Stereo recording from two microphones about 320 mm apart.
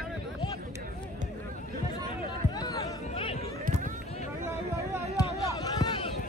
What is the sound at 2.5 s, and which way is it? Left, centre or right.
Chatter, centre.